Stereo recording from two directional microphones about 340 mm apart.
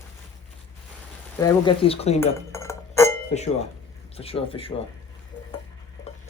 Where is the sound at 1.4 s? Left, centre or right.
Centre.